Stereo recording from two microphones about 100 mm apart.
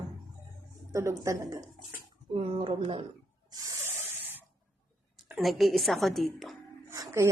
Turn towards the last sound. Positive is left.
turn(degrees=-30)  # may be behind; listen again after turning